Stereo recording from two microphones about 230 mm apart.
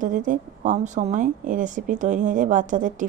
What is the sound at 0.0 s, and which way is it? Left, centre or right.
A woman's voice, right.